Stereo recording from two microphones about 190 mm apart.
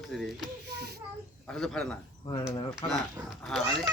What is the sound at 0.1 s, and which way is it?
Speech, centre (ahead or behind).